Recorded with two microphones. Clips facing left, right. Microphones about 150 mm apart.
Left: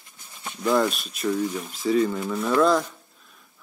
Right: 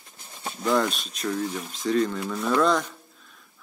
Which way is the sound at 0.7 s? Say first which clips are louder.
Left 2 dB; centre (ahead or behind).